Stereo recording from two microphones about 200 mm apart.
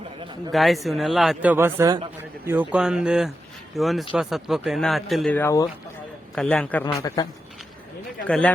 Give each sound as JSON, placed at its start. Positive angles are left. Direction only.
{"t": 0.5, "sound": "speech", "side_deg": 0}
{"t": 6.8, "sound": "a man's voice", "side_deg": 20}
{"t": 8.3, "sound": "speech", "side_deg": 5}